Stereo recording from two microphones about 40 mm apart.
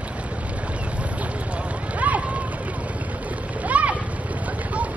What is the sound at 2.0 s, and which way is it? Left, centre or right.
Run, right.